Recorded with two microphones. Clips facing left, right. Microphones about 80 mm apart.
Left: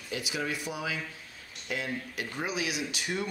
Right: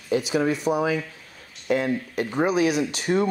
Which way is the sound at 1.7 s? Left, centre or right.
Right.